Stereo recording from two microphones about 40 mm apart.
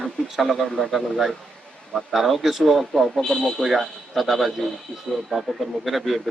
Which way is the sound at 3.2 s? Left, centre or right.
Centre.